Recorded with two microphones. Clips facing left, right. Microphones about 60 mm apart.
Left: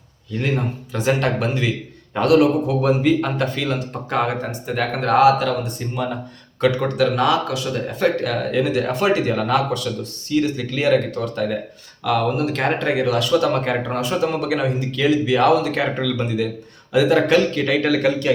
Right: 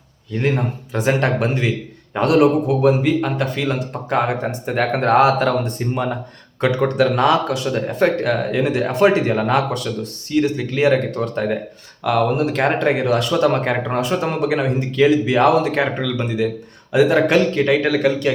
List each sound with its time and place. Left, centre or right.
0.5 s a man's voice: right
2.8 s speech: centre
4.6 s a man's voice: right
11.1 s speech: right
12.0 s a man's voice: centre
13.0 s a man's voice: right
16.9 s a man's voice: right
17.8 s speech: centre